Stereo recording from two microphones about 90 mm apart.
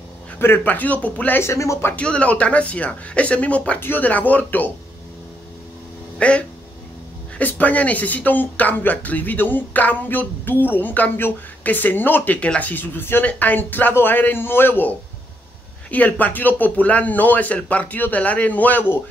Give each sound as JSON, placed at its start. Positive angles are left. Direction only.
{"t": 0.4, "sound": "speech", "side_deg": 20}
{"t": 1.4, "sound": "speech", "side_deg": 35}
{"t": 1.9, "sound": "speech", "side_deg": 15}
{"t": 6.1, "sound": "speech", "side_deg": 10}